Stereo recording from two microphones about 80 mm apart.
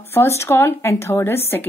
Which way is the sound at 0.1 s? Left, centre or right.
Left.